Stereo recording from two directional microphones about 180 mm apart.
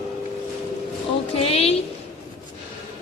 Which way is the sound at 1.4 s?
35° left (ahead or behind).